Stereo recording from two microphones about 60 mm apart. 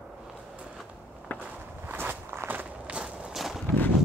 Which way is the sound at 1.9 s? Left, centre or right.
Right.